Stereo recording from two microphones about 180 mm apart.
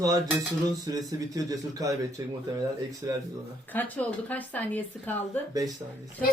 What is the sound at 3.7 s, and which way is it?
Speech, 10° left (ahead or behind).